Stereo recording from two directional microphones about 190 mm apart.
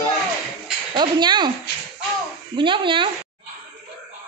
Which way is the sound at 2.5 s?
25° right (ahead or behind).